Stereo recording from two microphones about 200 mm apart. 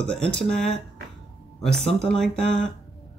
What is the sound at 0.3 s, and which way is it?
Speech, 5° left (ahead or behind).